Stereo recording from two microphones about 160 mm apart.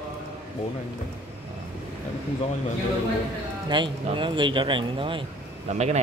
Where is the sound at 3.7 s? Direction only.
30° right (ahead or behind).